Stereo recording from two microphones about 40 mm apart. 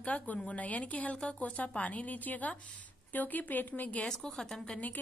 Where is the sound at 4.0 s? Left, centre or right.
Centre.